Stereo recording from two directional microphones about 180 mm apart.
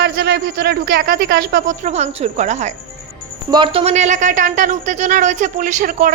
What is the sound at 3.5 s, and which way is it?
A woman's voice, 25° right (ahead or behind).